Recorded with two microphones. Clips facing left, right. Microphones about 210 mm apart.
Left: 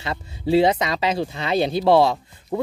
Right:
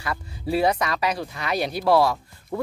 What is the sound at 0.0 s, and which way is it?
Speech, 25° left (ahead or behind).